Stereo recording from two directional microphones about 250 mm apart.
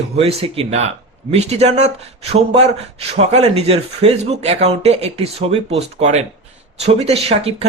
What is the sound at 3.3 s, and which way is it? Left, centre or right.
Speech, right.